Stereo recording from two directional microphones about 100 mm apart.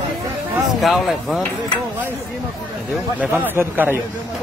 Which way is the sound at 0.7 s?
Centre (ahead or behind).